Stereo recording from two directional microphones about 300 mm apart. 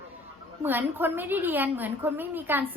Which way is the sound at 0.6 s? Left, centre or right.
Centre.